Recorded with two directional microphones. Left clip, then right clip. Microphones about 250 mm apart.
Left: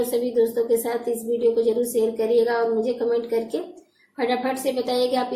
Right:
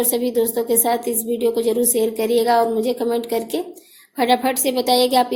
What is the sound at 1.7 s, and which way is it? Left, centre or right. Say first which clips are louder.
A woman's voice: right 2 dB; right.